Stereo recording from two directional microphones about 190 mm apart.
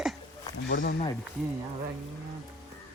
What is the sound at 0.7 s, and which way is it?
Speech, 55° left (ahead or behind).